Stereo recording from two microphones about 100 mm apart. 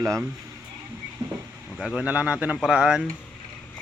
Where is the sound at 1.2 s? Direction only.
45° right (ahead or behind).